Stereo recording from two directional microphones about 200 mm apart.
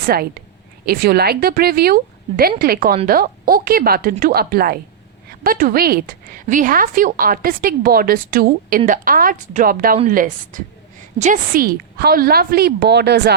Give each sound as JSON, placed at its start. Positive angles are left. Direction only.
{"t": 0.0, "sound": "a woman's voice", "side_deg": -50}